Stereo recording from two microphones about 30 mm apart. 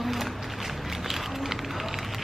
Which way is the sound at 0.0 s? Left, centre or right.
Centre.